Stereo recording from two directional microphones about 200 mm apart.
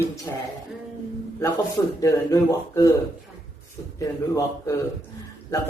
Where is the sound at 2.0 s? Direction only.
15° left (ahead or behind).